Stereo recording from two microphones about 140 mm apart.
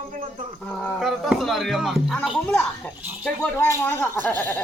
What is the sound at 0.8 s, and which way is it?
Speech, 10° left (ahead or behind).